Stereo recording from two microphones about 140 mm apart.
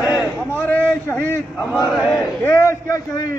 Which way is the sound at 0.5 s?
15° left (ahead or behind).